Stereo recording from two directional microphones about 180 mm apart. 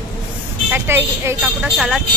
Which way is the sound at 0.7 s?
10° right (ahead or behind).